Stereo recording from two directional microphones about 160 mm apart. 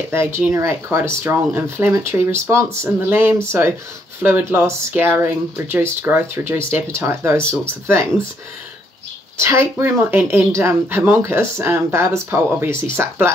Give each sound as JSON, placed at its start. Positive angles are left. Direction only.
{"t": 0.1, "sound": "speech", "side_deg": -15}
{"t": 9.4, "sound": "speech", "side_deg": -15}